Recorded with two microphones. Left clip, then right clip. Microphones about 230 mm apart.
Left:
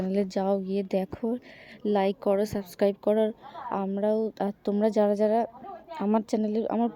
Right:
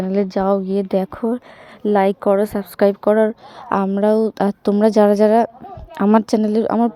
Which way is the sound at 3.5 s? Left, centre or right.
Right.